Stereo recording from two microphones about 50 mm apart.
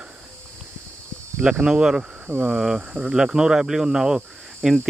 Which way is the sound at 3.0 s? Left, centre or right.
Centre.